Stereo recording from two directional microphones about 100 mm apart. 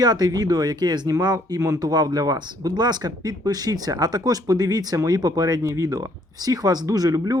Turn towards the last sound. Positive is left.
turn(degrees=-40)  # may be behind; listen again after turning